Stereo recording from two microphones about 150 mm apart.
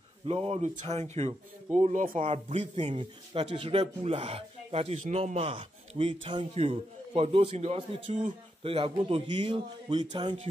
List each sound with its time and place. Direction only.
0.3 s speech: 40° right (ahead or behind)